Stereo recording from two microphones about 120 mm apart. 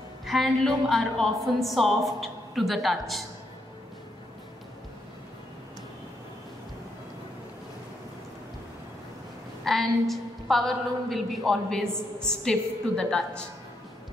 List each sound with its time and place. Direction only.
0.2 s a woman's voice: centre (ahead or behind)
9.7 s a woman's voice: centre (ahead or behind)